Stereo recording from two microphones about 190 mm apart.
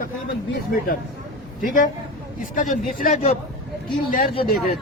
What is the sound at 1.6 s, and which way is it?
Speech, 45° left (ahead or behind).